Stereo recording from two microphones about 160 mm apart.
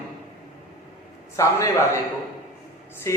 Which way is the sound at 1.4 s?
20° left (ahead or behind).